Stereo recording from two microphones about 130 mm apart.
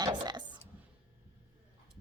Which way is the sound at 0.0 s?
35° right (ahead or behind).